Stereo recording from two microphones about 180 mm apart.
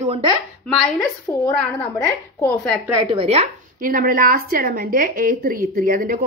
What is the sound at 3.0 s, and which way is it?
Speech, 35° right (ahead or behind).